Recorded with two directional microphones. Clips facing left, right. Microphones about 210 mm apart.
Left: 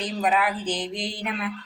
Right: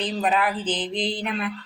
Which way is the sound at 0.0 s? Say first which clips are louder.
Right 1 dB; 10° left (ahead or behind).